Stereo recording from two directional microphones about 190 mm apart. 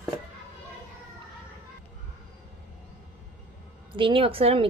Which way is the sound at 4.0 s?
25° right (ahead or behind).